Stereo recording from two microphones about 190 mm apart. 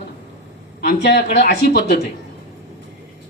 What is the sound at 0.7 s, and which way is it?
Speech, 55° left (ahead or behind).